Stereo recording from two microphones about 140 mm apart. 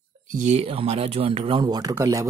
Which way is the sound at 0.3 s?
60° right (ahead or behind).